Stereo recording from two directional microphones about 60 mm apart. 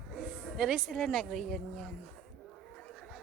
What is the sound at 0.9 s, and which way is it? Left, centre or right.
Speech, centre.